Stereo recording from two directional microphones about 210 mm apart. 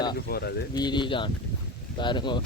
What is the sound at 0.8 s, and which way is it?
Speech, 20° left (ahead or behind).